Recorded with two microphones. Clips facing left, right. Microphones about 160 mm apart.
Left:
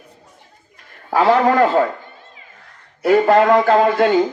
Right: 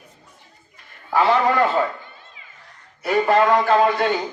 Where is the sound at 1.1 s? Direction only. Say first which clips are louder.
Left 4 dB; 50° left (ahead or behind).